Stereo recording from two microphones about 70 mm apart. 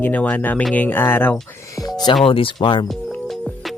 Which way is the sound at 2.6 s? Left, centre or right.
Left.